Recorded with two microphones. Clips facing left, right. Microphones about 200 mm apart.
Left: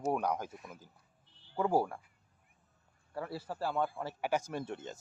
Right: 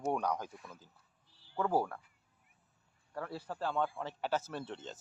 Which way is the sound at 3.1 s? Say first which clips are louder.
Left 2 dB; 10° left (ahead or behind).